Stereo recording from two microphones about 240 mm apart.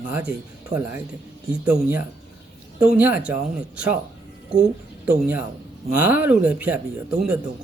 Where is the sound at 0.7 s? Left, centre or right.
Right.